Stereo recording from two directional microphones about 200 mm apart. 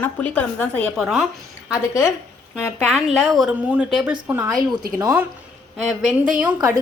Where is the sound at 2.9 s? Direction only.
Centre (ahead or behind).